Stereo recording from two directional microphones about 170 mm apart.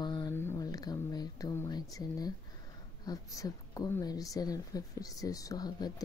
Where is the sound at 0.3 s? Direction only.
15° left (ahead or behind).